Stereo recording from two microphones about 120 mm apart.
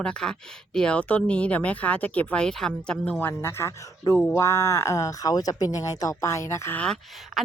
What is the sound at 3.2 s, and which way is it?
Speech, 20° left (ahead or behind).